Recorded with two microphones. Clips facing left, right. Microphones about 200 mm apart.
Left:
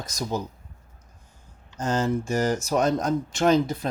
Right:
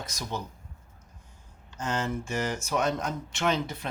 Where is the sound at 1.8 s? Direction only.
40° left (ahead or behind).